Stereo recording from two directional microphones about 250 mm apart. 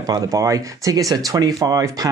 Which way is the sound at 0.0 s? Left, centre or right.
Centre.